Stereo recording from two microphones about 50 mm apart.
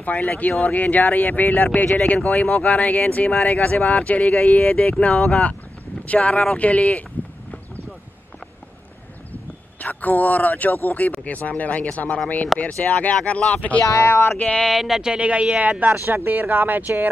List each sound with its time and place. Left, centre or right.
0.0 s speech: left
9.3 s speech: left
14.0 s a sound: left
14.6 s speech: centre
15.0 s speech: centre
16.1 s speech: right